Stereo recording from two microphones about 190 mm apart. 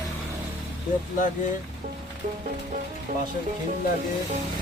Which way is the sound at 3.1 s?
45° right (ahead or behind).